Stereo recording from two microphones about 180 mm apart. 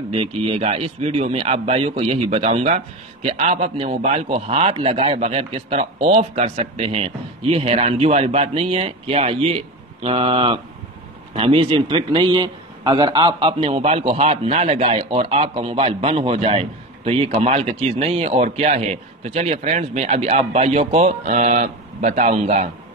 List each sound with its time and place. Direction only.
0.1 s a man's voice: 30° right (ahead or behind)